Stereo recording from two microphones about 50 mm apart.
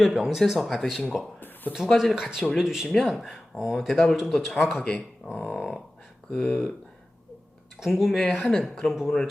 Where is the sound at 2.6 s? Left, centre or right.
Centre.